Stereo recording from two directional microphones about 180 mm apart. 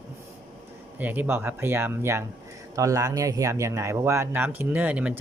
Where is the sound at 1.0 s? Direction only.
10° right (ahead or behind).